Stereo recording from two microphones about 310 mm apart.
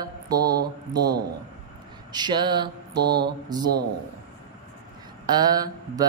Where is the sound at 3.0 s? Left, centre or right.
Right.